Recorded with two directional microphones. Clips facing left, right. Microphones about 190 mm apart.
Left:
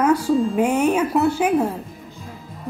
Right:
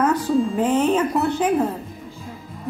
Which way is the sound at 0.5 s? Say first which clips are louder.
Even; 10° left (ahead or behind).